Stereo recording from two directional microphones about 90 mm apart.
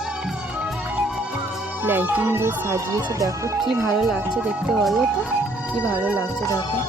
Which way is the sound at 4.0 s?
Centre (ahead or behind).